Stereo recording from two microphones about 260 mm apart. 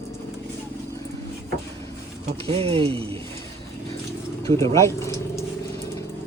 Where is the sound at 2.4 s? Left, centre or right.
Right.